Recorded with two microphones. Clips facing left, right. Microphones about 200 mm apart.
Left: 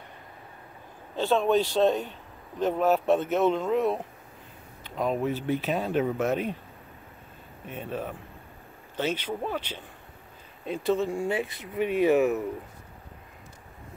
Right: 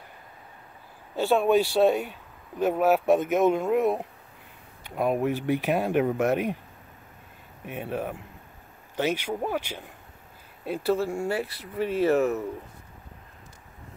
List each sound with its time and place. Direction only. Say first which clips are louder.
1.1 s speech: right 2 dB; 10° right (ahead or behind)
7.6 s speech: right 3 dB; 10° right (ahead or behind)
11.2 s speech: even; 20° left (ahead or behind)